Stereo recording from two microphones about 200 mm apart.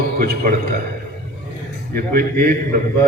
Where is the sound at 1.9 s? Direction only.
45° right (ahead or behind).